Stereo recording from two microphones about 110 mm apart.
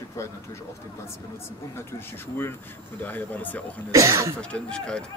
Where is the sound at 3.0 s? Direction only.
15° left (ahead or behind).